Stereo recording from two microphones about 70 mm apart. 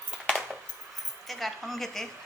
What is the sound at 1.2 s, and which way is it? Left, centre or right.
Speech, centre.